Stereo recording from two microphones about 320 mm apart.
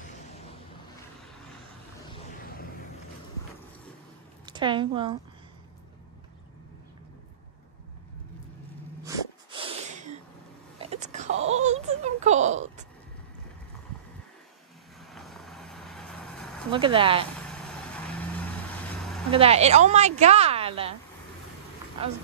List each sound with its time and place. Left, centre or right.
4.5 s a woman's voice: centre
9.0 s sneeze: centre
10.8 s wail: right
11.3 s a sound: right
11.6 s a sound: right
15.0 s vehicle: centre
16.7 s speech: centre
17.5 s vehicle: centre
19.3 s a woman's voice: centre